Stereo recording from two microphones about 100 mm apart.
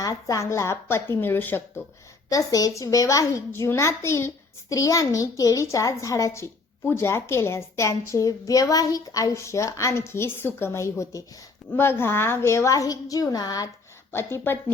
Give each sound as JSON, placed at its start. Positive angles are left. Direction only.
{"t": 0.0, "sound": "a woman's voice", "side_deg": 35}
{"t": 2.3, "sound": "a child's voice", "side_deg": 35}
{"t": 14.1, "sound": "a woman's voice", "side_deg": 25}